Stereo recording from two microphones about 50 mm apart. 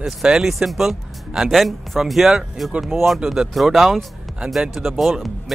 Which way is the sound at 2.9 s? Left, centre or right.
Right.